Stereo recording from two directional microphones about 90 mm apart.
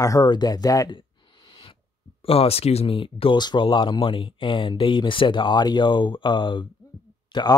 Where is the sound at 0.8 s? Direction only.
60° left (ahead or behind).